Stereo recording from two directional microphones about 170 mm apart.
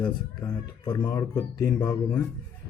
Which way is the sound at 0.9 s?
25° left (ahead or behind).